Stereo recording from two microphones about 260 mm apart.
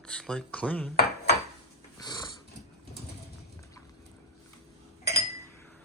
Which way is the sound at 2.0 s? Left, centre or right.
Centre.